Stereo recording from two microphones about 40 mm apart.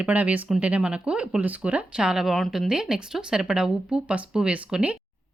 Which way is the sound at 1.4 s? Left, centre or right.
Right.